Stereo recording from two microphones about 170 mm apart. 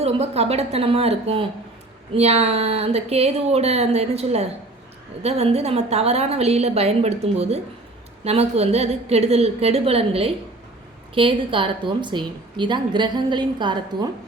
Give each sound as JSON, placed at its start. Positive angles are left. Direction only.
{"t": 0.0, "sound": "a woman's voice", "side_deg": -35}